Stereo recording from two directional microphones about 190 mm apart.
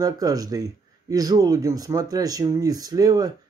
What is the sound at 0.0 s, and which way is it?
Speech, 20° right (ahead or behind).